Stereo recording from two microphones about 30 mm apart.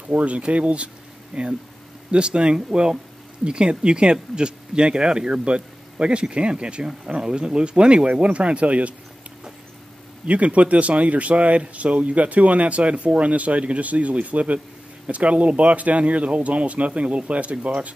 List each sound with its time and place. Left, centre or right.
0.1 s speech: right
1.3 s speech: right
10.2 s speech: right